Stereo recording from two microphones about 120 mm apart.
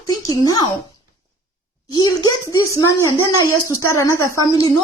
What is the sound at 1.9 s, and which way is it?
A woman's voice, 30° left (ahead or behind).